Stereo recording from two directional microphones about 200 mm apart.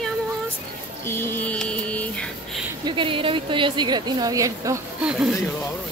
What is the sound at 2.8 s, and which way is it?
A woman's voice, 25° right (ahead or behind).